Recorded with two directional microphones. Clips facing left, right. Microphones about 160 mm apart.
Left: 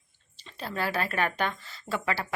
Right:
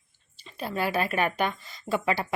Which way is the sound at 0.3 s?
10° right (ahead or behind).